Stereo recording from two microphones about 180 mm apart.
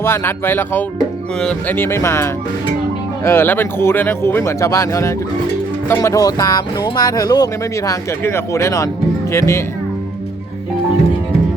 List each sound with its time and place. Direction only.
0.0 s speech: 15° left (ahead or behind)